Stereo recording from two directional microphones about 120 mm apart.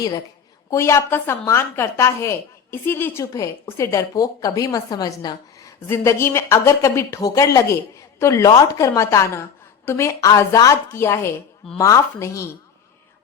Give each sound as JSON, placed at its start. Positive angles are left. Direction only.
{"t": 0.7, "sound": "a woman's voice", "side_deg": 25}